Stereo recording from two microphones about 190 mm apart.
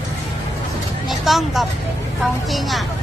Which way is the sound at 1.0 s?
Centre (ahead or behind).